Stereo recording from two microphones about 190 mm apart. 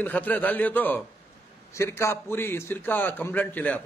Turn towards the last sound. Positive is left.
turn(degrees=10)  # may be behind; listen again after turning